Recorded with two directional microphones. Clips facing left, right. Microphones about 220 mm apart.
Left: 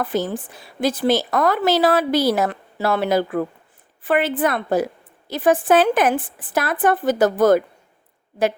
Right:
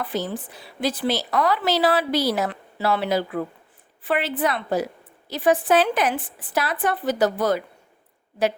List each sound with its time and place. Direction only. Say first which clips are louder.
0.0 s speech: left 4 dB; 45° left (ahead or behind)